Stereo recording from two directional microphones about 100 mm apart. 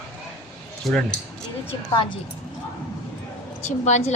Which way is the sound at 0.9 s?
Centre (ahead or behind).